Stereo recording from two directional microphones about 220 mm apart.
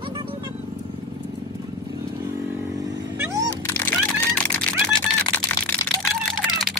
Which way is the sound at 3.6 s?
5° left (ahead or behind).